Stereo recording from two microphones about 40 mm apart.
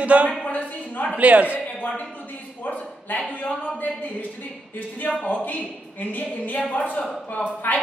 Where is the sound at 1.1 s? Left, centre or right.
Right.